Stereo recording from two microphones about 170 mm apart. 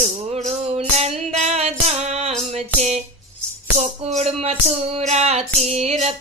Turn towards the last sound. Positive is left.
turn(degrees=-40)  # may be behind; listen again after turning